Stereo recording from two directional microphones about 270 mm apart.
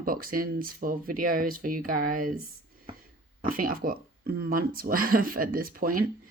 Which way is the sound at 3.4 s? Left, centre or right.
Right.